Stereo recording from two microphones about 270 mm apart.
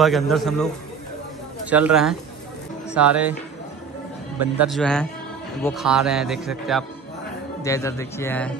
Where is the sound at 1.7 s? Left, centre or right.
Centre.